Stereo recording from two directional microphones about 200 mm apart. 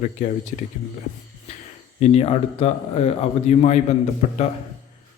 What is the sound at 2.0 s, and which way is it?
Speech, 30° left (ahead or behind).